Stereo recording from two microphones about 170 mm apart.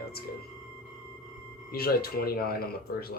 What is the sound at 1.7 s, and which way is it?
Speech, 60° left (ahead or behind).